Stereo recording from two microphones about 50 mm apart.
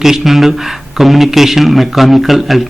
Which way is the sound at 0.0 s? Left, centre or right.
Centre.